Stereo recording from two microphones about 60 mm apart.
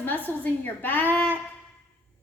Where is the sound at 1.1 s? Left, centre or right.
Left.